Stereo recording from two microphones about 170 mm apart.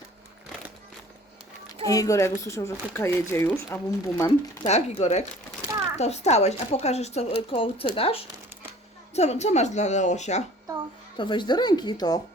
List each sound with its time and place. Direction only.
1.9 s speech: 20° left (ahead or behind)
4.6 s speech: 40° left (ahead or behind)
11.2 s speech: 25° left (ahead or behind)